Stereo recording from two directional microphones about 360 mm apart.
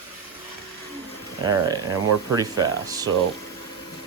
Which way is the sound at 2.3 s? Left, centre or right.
Centre.